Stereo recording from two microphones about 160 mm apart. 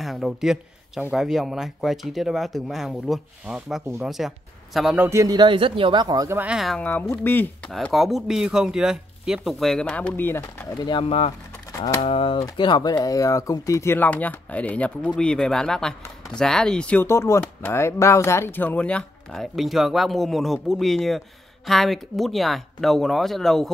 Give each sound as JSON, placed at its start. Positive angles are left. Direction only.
{"t": 0.0, "sound": "a man's voice", "side_deg": 0}
{"t": 6.4, "sound": "speech", "side_deg": 0}
{"t": 7.7, "sound": "speech", "side_deg": 0}
{"t": 10.4, "sound": "speech", "side_deg": 30}
{"t": 11.8, "sound": "speech", "side_deg": 25}
{"t": 12.1, "sound": "speech", "side_deg": 35}